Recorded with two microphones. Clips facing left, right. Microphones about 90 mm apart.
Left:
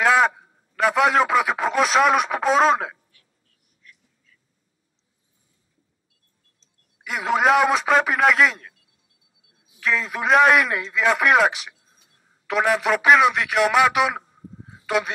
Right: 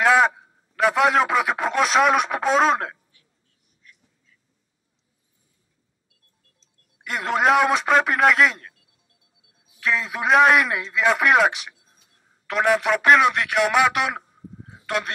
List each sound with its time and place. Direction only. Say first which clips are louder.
0.0 s a man's voice: right 1 dB; centre (ahead or behind)
3.8 s duck: left 2 dB; 20° right (ahead or behind)
7.0 s a man's voice: left 1 dB; centre (ahead or behind)
9.8 s a man's voice: even; centre (ahead or behind)